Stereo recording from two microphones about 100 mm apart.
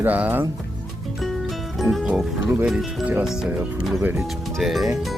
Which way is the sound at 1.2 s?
Centre (ahead or behind).